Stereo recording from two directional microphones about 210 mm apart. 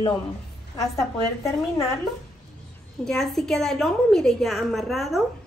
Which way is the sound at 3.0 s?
Centre (ahead or behind).